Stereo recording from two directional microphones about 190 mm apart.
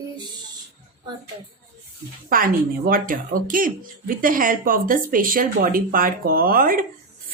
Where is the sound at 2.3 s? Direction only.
50° right (ahead or behind).